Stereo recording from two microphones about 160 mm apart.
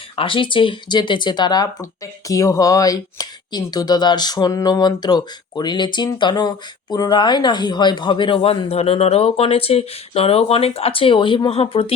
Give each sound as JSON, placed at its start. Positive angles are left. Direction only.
{"t": 0.2, "sound": "speech", "side_deg": 30}